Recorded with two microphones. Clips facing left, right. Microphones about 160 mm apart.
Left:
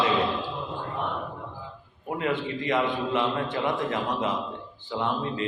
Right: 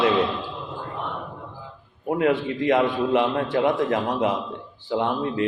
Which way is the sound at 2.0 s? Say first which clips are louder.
Right 7 dB; 60° right (ahead or behind).